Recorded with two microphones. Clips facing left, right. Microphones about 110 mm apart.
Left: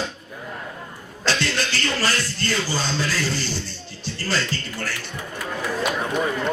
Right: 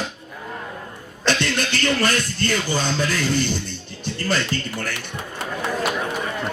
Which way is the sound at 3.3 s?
55° right (ahead or behind).